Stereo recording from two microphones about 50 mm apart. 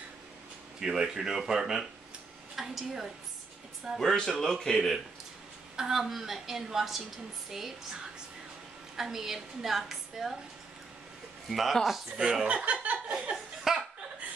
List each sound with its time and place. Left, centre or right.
0.7 s a woman's voice: centre
4.0 s speech: centre
5.8 s a woman's voice: centre
8.9 s a woman's voice: centre
11.4 s a woman's voice: centre
12.2 s speech: centre
13.1 s laughter: centre